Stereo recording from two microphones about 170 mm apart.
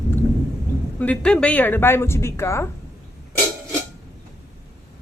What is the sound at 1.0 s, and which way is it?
Speech, 5° left (ahead or behind).